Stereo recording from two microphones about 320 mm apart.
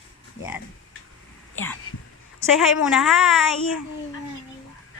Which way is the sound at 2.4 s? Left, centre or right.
Centre.